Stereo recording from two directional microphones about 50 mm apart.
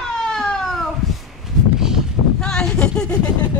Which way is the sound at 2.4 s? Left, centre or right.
Centre.